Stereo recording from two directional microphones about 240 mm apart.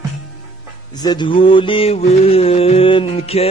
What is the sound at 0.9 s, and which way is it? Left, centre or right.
A man's voice, centre.